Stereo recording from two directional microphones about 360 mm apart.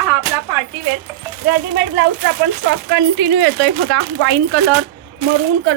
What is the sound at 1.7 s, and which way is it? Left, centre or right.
Speech, right.